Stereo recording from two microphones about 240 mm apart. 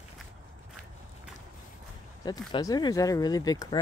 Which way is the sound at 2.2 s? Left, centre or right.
Centre.